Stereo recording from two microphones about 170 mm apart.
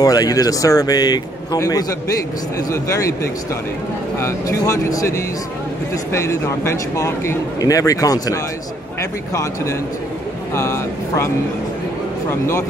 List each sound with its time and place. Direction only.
0.0 s speech: 20° left (ahead or behind)
4.2 s speech: 15° left (ahead or behind)
12.3 s speech: 15° left (ahead or behind)